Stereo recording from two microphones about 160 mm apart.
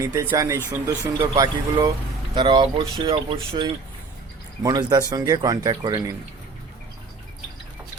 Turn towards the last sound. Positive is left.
turn(degrees=-25)  # may be behind; listen again after turning